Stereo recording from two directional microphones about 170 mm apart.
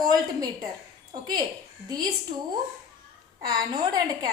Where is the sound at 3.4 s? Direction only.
25° right (ahead or behind).